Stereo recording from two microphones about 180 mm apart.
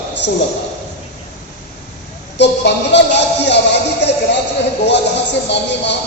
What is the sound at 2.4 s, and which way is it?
Speech, 75° left (ahead or behind).